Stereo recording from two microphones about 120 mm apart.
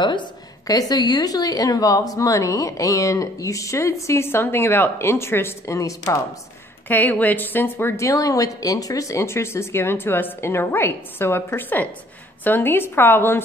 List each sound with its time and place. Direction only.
0.0 s a woman's voice: 40° left (ahead or behind)
6.9 s a woman's voice: 15° left (ahead or behind)